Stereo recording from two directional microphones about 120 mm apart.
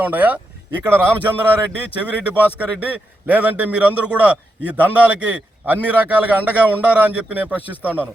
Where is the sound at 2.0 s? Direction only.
10° right (ahead or behind).